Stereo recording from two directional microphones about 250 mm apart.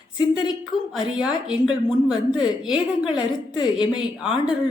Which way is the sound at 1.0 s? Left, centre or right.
Centre.